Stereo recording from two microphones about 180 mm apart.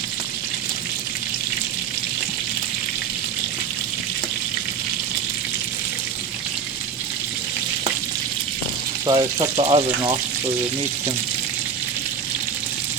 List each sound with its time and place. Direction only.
9.0 s speech: 25° right (ahead or behind)